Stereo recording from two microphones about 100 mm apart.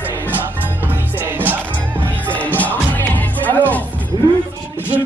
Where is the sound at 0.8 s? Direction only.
20° right (ahead or behind).